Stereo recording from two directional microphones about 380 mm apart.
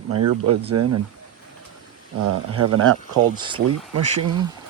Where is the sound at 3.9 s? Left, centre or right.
Right.